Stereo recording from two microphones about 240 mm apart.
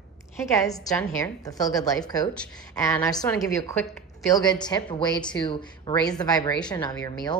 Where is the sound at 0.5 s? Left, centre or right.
Centre.